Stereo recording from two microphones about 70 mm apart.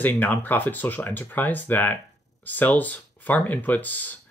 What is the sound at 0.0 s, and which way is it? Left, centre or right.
Speech, left.